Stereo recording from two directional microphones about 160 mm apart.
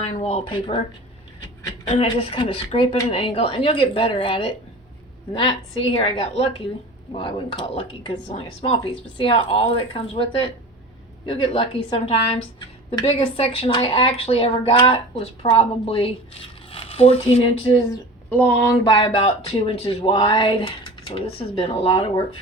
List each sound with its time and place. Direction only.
0.1 s speech: 40° left (ahead or behind)
1.9 s speech: 35° left (ahead or behind)
11.3 s speech: 35° left (ahead or behind)
18.3 s speech: 10° left (ahead or behind)
18.7 s speech: 25° left (ahead or behind)